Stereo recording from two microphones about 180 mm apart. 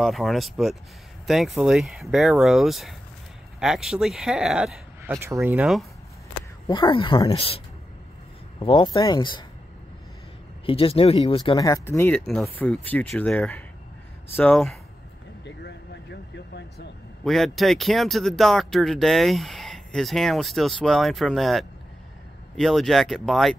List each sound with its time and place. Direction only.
0.0 s speech: centre (ahead or behind)
5.1 s speech: 15° right (ahead or behind)
6.7 s speech: 25° left (ahead or behind)
10.6 s speech: 30° left (ahead or behind); by 14.8 s 5° left (ahead or behind)
15.4 s vehicle: 75° left (ahead or behind)
17.2 s speech: centre (ahead or behind)